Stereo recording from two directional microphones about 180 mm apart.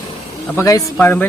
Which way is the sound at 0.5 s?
15° left (ahead or behind).